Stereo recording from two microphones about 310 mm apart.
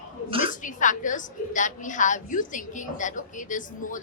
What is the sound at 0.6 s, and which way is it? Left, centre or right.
A woman's voice, left.